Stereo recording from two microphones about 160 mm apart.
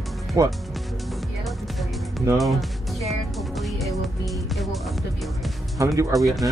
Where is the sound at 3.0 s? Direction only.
Centre (ahead or behind).